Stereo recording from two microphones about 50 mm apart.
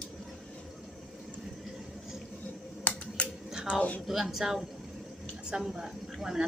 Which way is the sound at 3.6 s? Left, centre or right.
Left.